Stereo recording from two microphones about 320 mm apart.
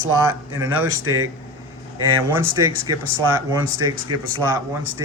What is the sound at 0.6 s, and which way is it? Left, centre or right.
Speech, centre.